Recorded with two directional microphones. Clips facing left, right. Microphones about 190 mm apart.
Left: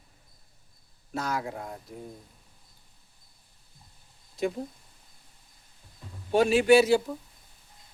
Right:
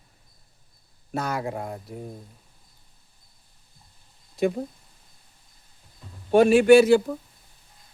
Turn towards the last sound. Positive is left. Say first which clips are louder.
# right 5 dB
turn(degrees=-55)  # may be behind; listen again after turning